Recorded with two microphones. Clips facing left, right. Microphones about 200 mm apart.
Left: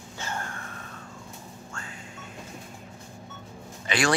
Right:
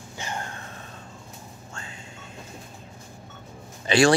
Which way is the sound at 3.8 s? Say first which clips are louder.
Right 7 dB; 30° right (ahead or behind).